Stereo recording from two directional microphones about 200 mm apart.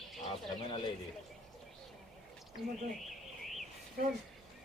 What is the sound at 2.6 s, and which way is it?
Speech, centre (ahead or behind).